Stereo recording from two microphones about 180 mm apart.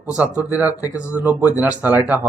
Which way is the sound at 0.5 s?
10° right (ahead or behind).